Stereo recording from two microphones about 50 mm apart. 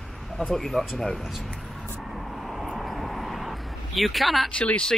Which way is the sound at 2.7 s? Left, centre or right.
Centre.